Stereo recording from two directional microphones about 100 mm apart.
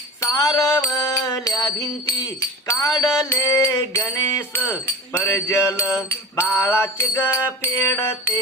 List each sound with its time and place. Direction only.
0.2 s music: 35° left (ahead or behind)
2.4 s jingle bell: 30° left (ahead or behind)
3.2 s music: 30° left (ahead or behind)